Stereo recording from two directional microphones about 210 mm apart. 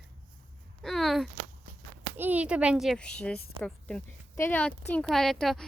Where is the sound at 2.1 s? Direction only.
10° right (ahead or behind).